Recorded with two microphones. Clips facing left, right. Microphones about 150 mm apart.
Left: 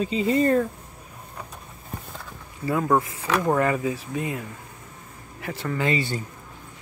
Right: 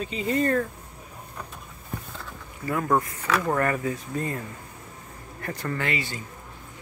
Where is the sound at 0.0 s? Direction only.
25° left (ahead or behind).